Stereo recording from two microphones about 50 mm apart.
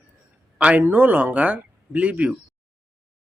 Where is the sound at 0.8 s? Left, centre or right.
Right.